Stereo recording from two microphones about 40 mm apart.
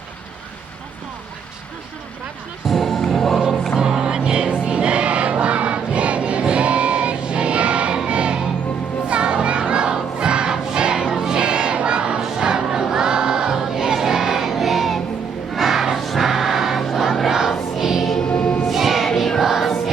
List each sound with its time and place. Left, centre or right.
2.6 s music: centre
3.8 s music: centre
9.0 s crowd: right; by 16.0 s centre
16.0 s music: centre
16.8 s choir: centre
17.2 s choir: centre
17.7 s music: centre
18.7 s choir: centre